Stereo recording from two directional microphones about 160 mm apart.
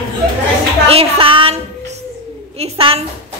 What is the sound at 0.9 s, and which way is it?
Speech, 35° right (ahead or behind).